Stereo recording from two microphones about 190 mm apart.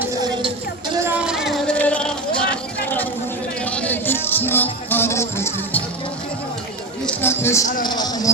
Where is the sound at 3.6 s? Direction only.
5° left (ahead or behind).